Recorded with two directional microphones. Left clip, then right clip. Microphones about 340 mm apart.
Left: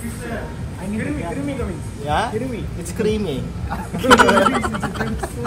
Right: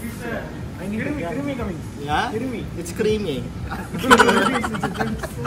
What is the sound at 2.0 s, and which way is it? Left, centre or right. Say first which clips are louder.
Speech: left 2 dB; centre.